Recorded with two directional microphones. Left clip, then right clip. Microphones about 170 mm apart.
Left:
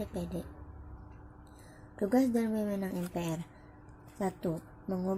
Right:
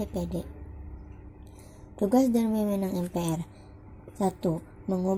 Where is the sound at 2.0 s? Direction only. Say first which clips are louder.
Right 5 dB; 15° right (ahead or behind).